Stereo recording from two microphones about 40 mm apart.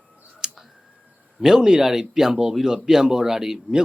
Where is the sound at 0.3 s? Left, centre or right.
Centre.